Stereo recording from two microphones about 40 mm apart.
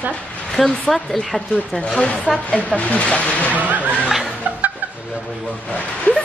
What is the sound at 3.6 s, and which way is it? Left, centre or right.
Speech, right.